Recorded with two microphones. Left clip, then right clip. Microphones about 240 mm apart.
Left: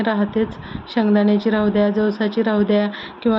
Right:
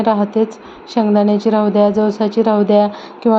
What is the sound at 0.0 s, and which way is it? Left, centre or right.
A woman's voice, centre.